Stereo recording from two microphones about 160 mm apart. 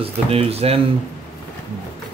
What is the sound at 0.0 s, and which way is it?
Speech, 35° right (ahead or behind).